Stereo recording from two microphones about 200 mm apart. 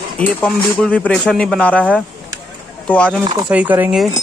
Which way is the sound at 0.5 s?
5° left (ahead or behind).